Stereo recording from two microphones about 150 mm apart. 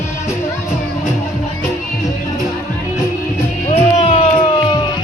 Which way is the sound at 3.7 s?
45° left (ahead or behind).